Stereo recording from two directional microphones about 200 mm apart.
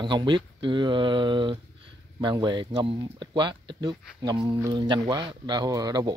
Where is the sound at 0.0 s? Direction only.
25° right (ahead or behind).